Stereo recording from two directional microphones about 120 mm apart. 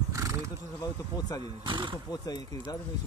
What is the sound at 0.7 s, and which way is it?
Speech, 30° left (ahead or behind).